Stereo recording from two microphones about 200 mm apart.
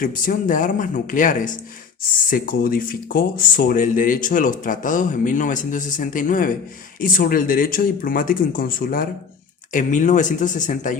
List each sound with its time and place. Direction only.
0.0 s speech: 45° left (ahead or behind)